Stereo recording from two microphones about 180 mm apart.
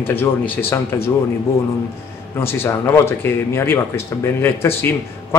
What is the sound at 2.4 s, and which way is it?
Speech, 15° left (ahead or behind).